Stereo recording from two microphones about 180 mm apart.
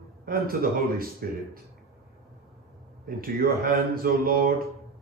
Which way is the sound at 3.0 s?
55° right (ahead or behind).